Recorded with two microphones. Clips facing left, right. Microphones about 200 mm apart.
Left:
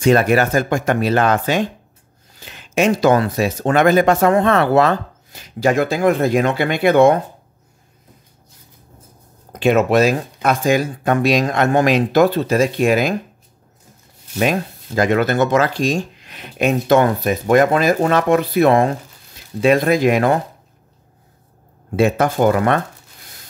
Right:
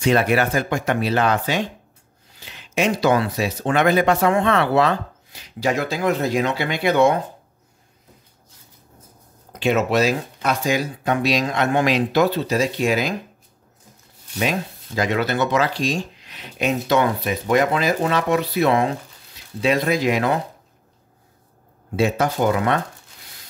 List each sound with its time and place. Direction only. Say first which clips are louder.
0.0 s speech: left 4 dB; 45° left (ahead or behind)
9.5 s speech: left 5 dB; 50° left (ahead or behind)
14.4 s speech: left 5 dB; 50° left (ahead or behind)
21.9 s speech: left 4 dB; 55° left (ahead or behind)